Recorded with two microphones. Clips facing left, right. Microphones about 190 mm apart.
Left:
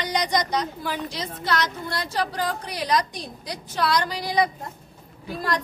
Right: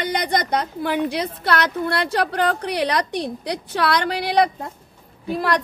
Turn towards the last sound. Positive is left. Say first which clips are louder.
# right 6 dB
turn(degrees=-65)  # may be behind; listen again after turning